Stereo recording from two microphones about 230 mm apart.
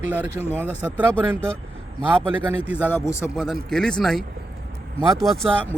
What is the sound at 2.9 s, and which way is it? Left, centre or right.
Speech, centre.